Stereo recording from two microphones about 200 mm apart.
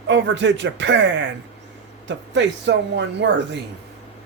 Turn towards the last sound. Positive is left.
turn(degrees=-60)  # may be behind; listen again after turning